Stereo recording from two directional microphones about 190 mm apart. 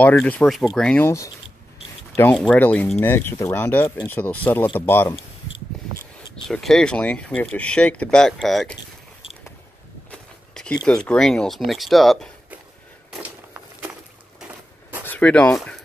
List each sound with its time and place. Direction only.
0.0 s speech: 5° left (ahead or behind)
2.3 s speech: 5° left (ahead or behind)
6.4 s speech: centre (ahead or behind)
10.1 s a sound: 5° left (ahead or behind)
10.9 s speech: 5° left (ahead or behind)
13.5 s a sound: 10° right (ahead or behind)
15.0 s speech: 5° left (ahead or behind)